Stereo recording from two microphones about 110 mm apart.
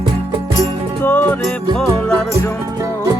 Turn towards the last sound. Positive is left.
turn(degrees=20)  # may be behind; listen again after turning